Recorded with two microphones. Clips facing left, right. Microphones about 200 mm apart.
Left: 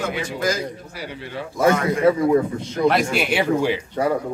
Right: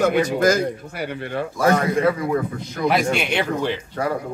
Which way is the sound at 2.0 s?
25° left (ahead or behind).